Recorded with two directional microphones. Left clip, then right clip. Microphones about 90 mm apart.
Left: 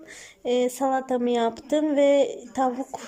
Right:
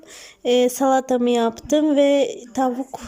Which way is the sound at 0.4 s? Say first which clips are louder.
Right 6 dB; 25° right (ahead or behind).